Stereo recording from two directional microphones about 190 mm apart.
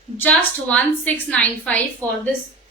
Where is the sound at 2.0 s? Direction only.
15° right (ahead or behind).